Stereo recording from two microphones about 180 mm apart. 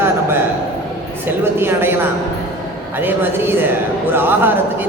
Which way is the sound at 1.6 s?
10° right (ahead or behind).